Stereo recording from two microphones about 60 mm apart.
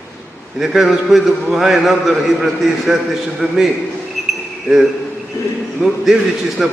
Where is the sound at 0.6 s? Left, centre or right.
Centre.